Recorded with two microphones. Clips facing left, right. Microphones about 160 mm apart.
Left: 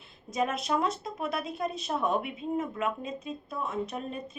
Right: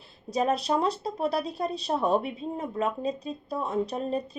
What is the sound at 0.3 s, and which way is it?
A woman's voice, 35° right (ahead or behind).